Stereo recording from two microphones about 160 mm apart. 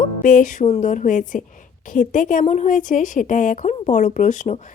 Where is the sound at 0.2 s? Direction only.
55° left (ahead or behind).